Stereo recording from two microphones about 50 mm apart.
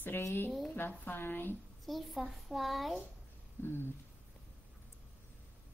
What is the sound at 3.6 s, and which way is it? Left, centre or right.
Speech, left.